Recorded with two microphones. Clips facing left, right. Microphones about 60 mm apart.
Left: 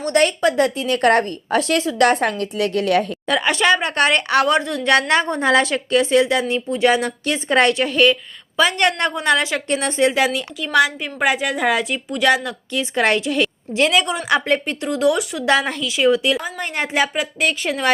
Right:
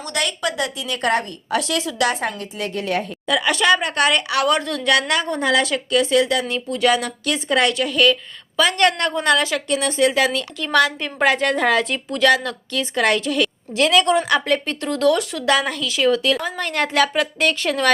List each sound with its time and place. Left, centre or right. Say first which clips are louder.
0.0 s a woman's voice: left 7 dB; left
3.2 s speech: right 2 dB; left
10.6 s a woman's voice: left 1 dB; centre
14.8 s a woman's voice: even; centre
15.4 s a woman's voice: left 1 dB; left